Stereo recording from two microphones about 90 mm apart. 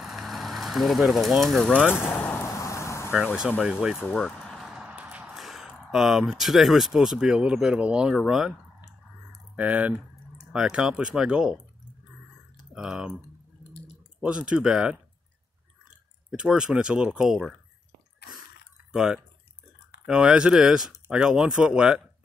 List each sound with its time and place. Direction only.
0.0 s vehicle: centre (ahead or behind)
1.9 s vehicle: 25° left (ahead or behind)
2.5 s vehicle: 35° left (ahead or behind)
3.3 s speech: 5° right (ahead or behind)
4.1 s vehicle: 5° left (ahead or behind)
4.6 s a sound: 10° right (ahead or behind)
5.3 s speech: centre (ahead or behind)
9.6 s speech: 15° right (ahead or behind)
14.2 s speech: 10° right (ahead or behind)
16.3 s speech: 10° right (ahead or behind)
18.9 s speech: 10° right (ahead or behind)